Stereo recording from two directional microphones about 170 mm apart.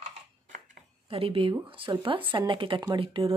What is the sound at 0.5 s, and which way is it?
Speech, 40° right (ahead or behind).